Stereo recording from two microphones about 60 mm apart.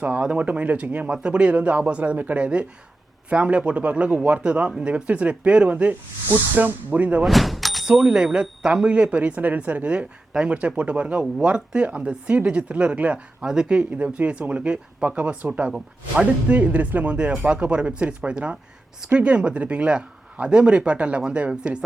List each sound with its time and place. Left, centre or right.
0.2 s speech: centre
7.2 s door: centre
7.9 s speech: centre